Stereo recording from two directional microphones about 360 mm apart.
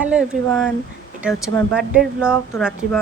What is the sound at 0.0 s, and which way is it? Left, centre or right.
Speech, centre.